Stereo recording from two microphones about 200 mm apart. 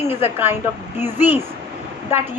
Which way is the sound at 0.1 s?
10° right (ahead or behind).